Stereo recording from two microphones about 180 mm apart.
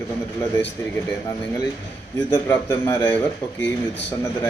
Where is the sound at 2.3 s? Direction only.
25° left (ahead or behind).